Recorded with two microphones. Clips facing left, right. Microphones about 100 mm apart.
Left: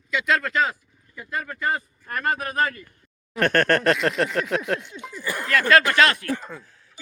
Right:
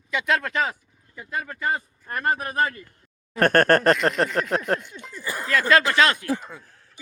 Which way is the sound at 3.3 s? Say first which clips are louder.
Right 2 dB; 45° right (ahead or behind).